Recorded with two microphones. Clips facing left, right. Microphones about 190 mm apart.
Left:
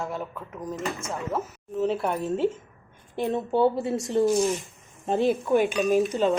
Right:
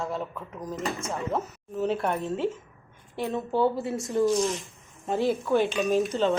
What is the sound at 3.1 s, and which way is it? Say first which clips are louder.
A woman's voice: left 3 dB; 20° left (ahead or behind).